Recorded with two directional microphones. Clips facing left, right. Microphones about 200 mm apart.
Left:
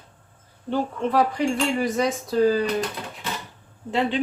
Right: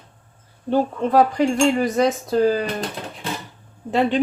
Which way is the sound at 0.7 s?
45° right (ahead or behind).